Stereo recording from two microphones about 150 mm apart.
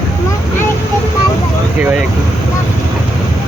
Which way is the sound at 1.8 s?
10° right (ahead or behind).